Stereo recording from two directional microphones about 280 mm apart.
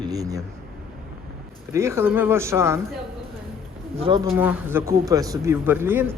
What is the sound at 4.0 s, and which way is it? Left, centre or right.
Speech, centre.